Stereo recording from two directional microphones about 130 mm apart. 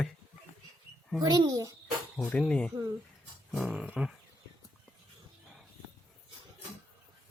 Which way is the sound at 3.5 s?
5° right (ahead or behind).